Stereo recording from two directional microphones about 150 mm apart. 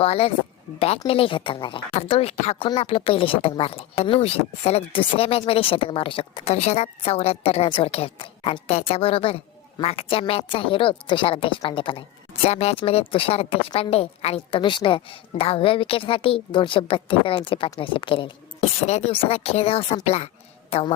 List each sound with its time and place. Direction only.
0.0 s a woman's voice: 40° left (ahead or behind)